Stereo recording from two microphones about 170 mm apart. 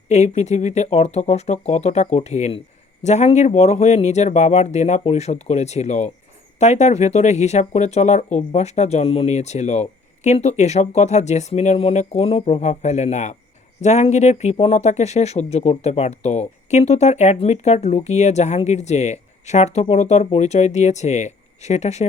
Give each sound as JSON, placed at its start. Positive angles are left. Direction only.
{"t": 0.1, "sound": "speech", "side_deg": 40}